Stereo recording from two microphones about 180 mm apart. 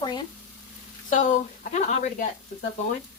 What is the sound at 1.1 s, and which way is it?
A woman's voice, 45° left (ahead or behind).